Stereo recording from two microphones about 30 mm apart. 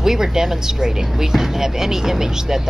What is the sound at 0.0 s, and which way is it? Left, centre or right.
Speech, centre.